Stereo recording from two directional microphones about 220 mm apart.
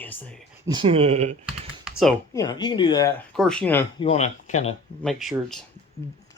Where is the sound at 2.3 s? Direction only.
15° left (ahead or behind).